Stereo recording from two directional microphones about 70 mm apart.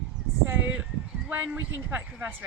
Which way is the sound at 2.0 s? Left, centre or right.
Right.